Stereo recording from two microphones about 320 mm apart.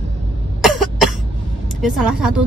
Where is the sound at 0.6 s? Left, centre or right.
Centre.